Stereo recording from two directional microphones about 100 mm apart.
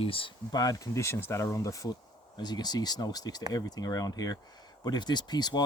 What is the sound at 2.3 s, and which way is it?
Speech, 45° left (ahead or behind).